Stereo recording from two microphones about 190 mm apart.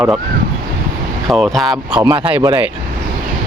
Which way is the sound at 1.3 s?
Centre (ahead or behind).